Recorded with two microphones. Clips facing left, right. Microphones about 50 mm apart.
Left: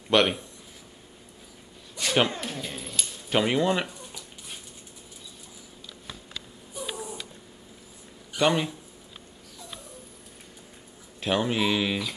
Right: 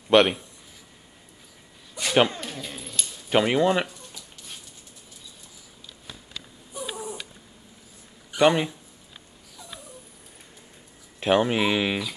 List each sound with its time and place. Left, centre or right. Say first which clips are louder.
0.1 s speech: right 4 dB; centre
2.0 s a sound: right 3 dB; centre
2.2 s speech: right 1 dB; centre
3.3 s speech: right 3 dB; centre
3.8 s a sound: right 1 dB; centre
8.3 s speech: right 4 dB; centre
11.1 s speech: right 4 dB; right